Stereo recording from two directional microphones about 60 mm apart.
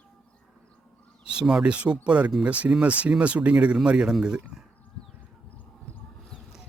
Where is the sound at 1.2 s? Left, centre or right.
Centre.